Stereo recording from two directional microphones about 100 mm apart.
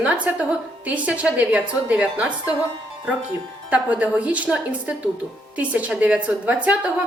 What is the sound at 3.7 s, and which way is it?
A woman's voice, 15° right (ahead or behind).